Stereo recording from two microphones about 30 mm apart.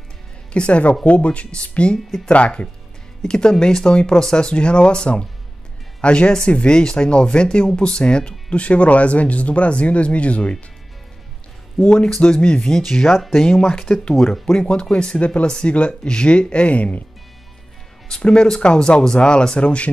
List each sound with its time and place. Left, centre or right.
0.5 s speech: left
3.2 s speech: left
11.8 s speech: centre
12.3 s speech: left
12.7 s speech: centre
13.1 s speech: centre
13.5 s speech: centre
14.7 s speech: left
18.2 s speech: left